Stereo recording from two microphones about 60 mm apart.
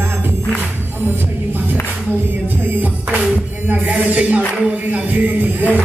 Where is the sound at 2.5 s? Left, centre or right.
Right.